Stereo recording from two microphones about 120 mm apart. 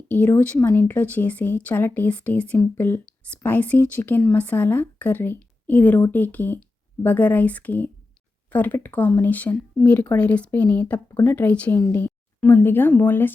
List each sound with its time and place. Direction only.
0.1 s speech: 15° left (ahead or behind)